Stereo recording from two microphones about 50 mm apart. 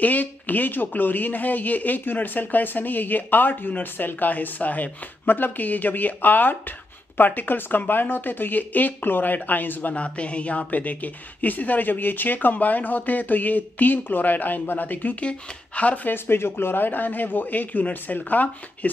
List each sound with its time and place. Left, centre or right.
0.0 s speech: left
16.1 s speech: left